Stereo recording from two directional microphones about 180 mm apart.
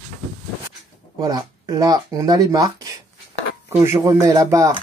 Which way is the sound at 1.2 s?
20° right (ahead or behind).